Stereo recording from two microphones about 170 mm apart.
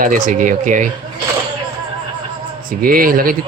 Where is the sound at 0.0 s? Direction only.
50° right (ahead or behind).